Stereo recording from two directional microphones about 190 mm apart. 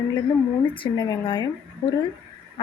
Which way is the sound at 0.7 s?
25° left (ahead or behind).